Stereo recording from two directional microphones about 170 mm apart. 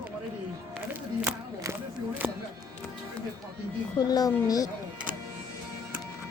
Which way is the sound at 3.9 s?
20° left (ahead or behind).